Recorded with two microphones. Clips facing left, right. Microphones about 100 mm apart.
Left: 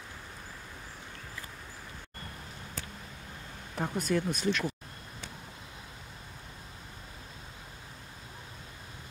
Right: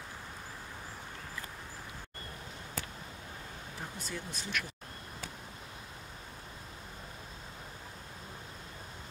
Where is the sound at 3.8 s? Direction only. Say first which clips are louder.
Left 13 dB; 65° left (ahead or behind).